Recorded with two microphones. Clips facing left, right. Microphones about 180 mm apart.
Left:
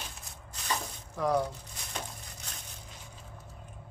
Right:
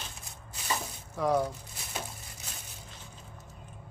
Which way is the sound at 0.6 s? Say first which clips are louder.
Even; 5° right (ahead or behind).